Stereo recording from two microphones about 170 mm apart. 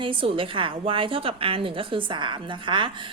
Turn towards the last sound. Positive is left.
turn(degrees=-30)  # may be behind; listen again after turning